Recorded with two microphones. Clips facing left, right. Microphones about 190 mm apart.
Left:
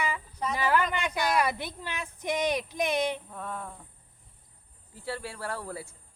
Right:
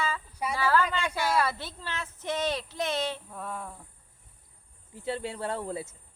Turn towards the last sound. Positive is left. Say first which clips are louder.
# right 3 dB
turn(degrees=-20)  # may be behind; listen again after turning